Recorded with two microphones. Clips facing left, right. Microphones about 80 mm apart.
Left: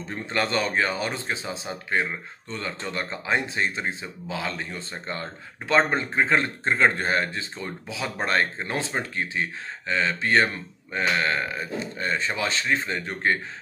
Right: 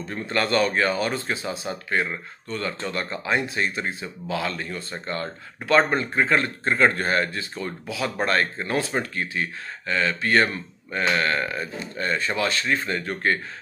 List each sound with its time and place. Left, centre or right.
0.1 s speech: left